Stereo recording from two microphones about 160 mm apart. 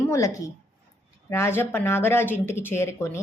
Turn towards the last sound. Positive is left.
turn(degrees=15)  # may be behind; listen again after turning